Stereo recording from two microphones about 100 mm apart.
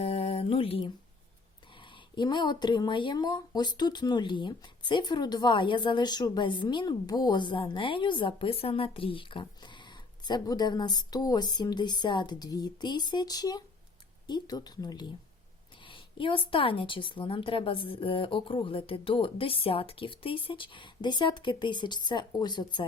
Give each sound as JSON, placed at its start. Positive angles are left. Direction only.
{"t": 0.0, "sound": "mantra", "side_deg": 90}
{"t": 1.7, "sound": "speech", "side_deg": 55}
{"t": 15.8, "sound": "a sound", "side_deg": 55}
{"t": 16.5, "sound": "a woman's voice", "side_deg": 65}